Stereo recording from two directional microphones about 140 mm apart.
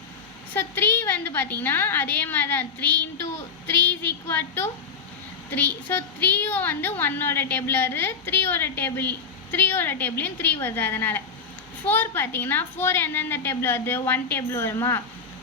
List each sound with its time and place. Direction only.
0.5 s a woman's voice: 15° left (ahead or behind)